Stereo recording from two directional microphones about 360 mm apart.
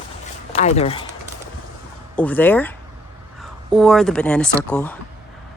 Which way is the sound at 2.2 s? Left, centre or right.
Centre.